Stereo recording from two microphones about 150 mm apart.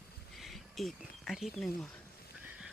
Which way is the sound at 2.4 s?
15° right (ahead or behind).